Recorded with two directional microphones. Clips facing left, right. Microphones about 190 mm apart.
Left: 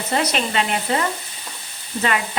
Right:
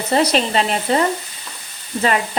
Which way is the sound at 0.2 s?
35° right (ahead or behind).